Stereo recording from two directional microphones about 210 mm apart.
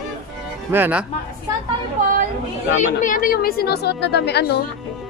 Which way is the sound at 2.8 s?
40° left (ahead or behind).